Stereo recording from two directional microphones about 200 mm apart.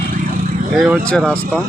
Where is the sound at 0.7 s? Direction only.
Centre (ahead or behind).